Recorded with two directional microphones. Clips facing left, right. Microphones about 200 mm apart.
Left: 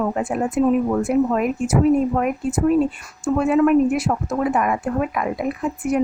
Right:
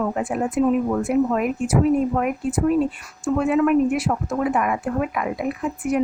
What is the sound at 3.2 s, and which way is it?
A woman's voice, 40° left (ahead or behind).